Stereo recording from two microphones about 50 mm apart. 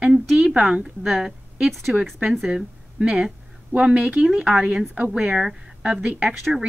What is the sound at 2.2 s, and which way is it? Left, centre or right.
A woman's voice, centre.